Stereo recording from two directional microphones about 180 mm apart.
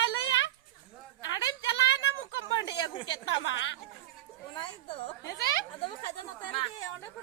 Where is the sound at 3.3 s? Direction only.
90° left.